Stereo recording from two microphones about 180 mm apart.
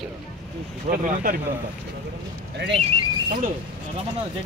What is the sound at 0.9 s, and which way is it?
Speech, 50° right (ahead or behind).